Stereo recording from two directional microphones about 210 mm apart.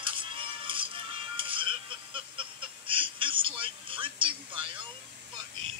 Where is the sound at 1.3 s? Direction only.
25° right (ahead or behind).